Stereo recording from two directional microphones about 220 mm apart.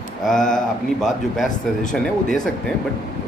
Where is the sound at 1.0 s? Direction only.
Centre (ahead or behind).